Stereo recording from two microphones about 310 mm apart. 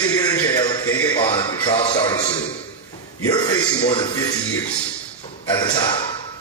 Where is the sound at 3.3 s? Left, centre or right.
Centre.